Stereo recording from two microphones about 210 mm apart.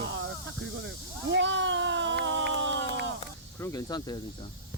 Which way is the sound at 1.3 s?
60° right (ahead or behind).